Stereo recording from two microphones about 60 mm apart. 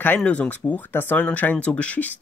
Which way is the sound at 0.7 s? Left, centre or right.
Left.